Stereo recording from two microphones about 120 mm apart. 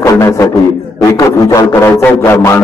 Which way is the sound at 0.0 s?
25° left (ahead or behind).